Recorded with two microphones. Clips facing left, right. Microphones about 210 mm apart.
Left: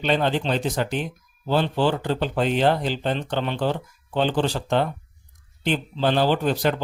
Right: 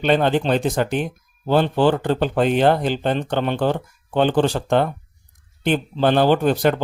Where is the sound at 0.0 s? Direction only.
50° right (ahead or behind).